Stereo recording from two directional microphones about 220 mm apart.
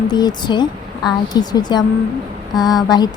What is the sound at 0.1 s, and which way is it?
Speech, 20° left (ahead or behind).